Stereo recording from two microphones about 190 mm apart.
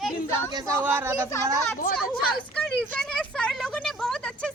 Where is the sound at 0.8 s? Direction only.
10° right (ahead or behind).